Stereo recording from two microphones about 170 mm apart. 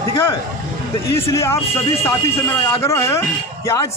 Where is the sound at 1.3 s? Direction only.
15° left (ahead or behind).